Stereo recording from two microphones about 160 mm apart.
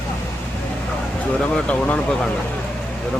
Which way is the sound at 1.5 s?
5° left (ahead or behind).